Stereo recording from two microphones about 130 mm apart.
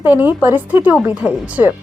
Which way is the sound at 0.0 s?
15° right (ahead or behind).